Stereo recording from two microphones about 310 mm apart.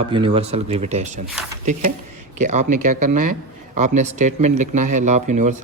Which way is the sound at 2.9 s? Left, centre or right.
Right.